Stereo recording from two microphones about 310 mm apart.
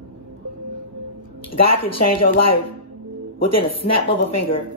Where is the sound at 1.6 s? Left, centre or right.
Left.